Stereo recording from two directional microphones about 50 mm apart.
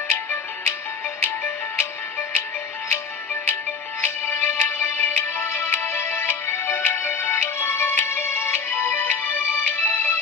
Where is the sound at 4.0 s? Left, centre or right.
Left.